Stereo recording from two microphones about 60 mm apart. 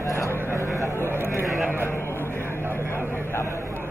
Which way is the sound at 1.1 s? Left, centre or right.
Right.